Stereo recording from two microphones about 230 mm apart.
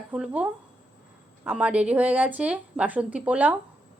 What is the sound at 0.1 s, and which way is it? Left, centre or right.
Speech, centre.